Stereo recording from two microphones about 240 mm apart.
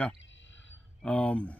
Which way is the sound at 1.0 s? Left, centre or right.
Centre.